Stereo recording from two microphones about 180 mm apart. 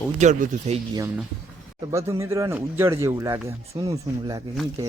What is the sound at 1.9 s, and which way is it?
Speech, 15° right (ahead or behind).